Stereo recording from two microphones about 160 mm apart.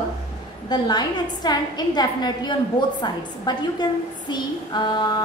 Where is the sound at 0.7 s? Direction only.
25° left (ahead or behind).